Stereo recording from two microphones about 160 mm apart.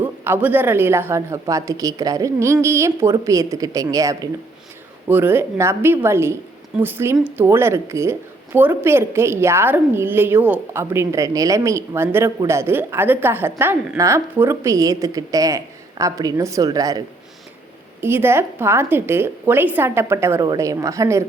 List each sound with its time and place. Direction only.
0.0 s a woman's voice: 10° right (ahead or behind)
18.0 s a woman's voice: 15° right (ahead or behind)